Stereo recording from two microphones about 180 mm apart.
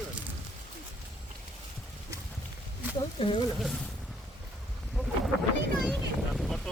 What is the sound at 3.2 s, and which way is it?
Speech, 30° left (ahead or behind).